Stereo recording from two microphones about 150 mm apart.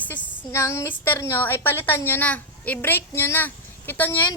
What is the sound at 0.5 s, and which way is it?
Speech, 20° left (ahead or behind).